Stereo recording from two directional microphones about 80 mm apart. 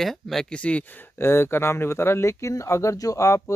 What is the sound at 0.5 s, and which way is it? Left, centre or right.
Speech, centre.